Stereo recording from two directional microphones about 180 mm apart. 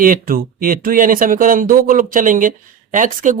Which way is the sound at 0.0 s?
50° right (ahead or behind).